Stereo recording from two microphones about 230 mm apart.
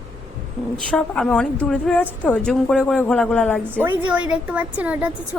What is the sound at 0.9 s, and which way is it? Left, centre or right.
A woman's voice, centre.